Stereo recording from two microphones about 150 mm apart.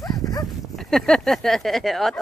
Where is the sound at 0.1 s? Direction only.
25° left (ahead or behind).